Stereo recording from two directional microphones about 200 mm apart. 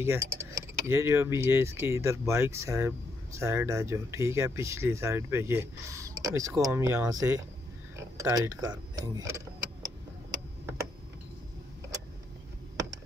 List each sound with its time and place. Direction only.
0.0 s speech: 10° right (ahead or behind)